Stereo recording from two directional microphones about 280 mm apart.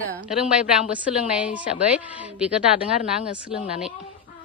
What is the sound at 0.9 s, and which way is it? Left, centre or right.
A woman's voice, centre.